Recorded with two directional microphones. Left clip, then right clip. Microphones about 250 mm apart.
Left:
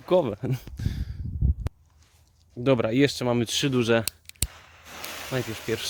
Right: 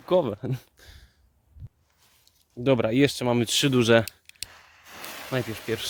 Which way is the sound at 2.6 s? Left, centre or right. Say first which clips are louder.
Even; centre.